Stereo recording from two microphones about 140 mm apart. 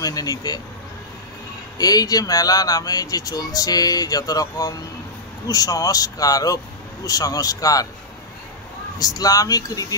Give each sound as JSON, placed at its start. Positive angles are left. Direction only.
{"t": 0.0, "sound": "speech", "side_deg": 25}
{"t": 1.8, "sound": "speech", "side_deg": 25}
{"t": 8.9, "sound": "speech", "side_deg": 25}